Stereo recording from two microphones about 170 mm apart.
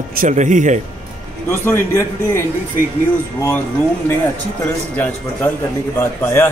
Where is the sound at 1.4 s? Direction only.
15° left (ahead or behind).